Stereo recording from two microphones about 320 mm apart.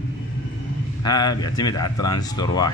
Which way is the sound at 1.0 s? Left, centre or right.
Centre.